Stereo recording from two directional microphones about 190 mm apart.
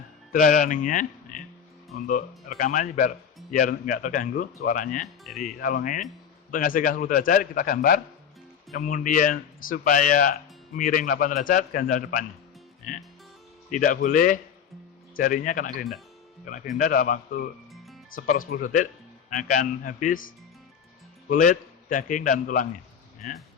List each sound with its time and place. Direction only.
0.3 s speech: 45° left (ahead or behind)
5.2 s speech: centre (ahead or behind)
5.5 s speech: 50° left (ahead or behind)
13.7 s speech: 45° left (ahead or behind)
16.7 s a man's voice: 45° left (ahead or behind)